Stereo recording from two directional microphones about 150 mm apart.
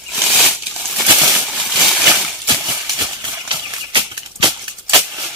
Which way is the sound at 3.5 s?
30° right (ahead or behind).